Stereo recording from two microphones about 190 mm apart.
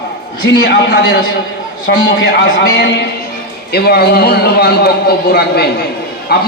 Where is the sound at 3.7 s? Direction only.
55° left (ahead or behind).